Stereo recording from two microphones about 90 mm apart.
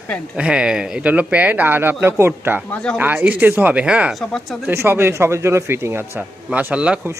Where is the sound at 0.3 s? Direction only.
10° right (ahead or behind); by 2.6 s 25° right (ahead or behind).